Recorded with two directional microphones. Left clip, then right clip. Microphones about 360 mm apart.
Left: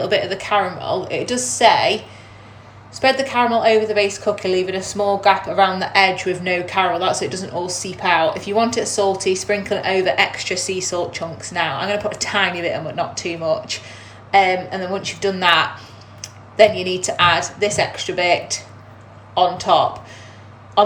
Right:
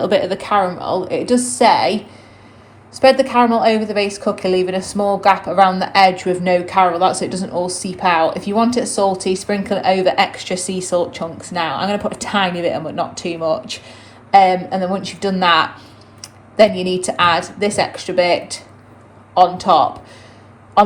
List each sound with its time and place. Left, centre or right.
0.0 s speech: centre
2.9 s speech: centre
16.2 s a sound: centre
16.8 s speech: centre